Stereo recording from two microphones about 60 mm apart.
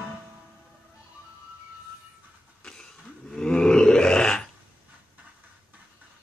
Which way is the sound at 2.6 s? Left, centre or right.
Centre.